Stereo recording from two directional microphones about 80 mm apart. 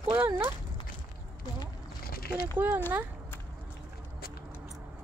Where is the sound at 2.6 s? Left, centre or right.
Right.